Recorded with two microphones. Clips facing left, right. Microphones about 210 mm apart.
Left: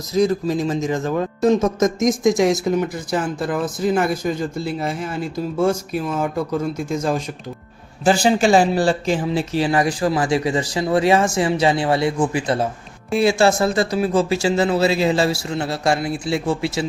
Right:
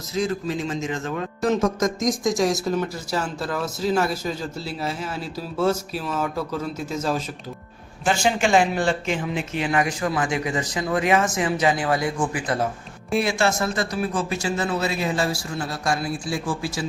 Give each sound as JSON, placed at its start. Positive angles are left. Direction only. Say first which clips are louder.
{"t": 0.1, "sound": "speech", "louder": "left 7 dB", "side_deg": 40}
{"t": 1.4, "sound": "speech", "louder": "left 4 dB", "side_deg": 20}
{"t": 4.0, "sound": "a man's voice", "louder": "left 5 dB", "side_deg": 50}
{"t": 6.1, "sound": "speech", "louder": "left 3 dB", "side_deg": 10}
{"t": 8.0, "sound": "speech", "louder": "left 6 dB", "side_deg": 35}